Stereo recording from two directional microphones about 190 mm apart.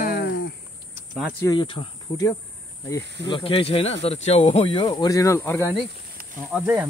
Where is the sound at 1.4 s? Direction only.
25° left (ahead or behind).